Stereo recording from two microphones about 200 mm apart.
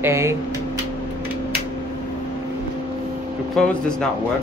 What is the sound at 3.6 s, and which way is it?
Speech, centre (ahead or behind).